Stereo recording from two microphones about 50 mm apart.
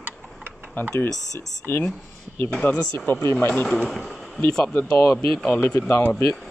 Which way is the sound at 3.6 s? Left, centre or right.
Centre.